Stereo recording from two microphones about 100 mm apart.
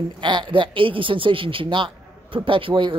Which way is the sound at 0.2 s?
50° right (ahead or behind).